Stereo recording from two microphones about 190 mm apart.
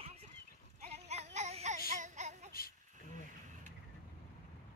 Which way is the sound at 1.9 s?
40° right (ahead or behind).